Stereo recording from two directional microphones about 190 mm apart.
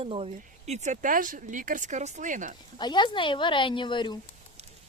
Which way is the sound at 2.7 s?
25° left (ahead or behind).